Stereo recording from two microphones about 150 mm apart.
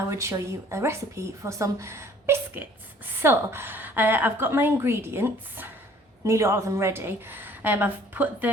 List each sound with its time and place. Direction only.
0.1 s a woman's voice: 20° right (ahead or behind)